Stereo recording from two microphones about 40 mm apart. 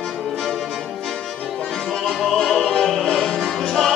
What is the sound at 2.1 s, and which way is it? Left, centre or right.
Music, centre.